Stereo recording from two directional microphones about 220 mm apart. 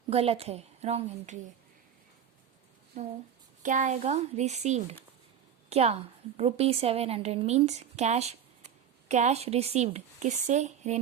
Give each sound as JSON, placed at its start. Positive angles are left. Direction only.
{"t": 0.1, "sound": "a woman's voice", "side_deg": -25}
{"t": 2.9, "sound": "a woman's voice", "side_deg": -30}